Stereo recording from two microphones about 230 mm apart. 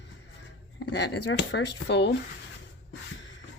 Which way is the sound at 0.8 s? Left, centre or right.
Left.